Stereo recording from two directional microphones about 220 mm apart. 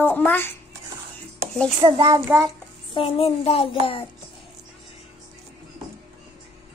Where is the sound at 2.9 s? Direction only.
25° left (ahead or behind).